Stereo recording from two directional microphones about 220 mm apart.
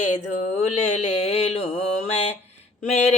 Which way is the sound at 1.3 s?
30° left (ahead or behind).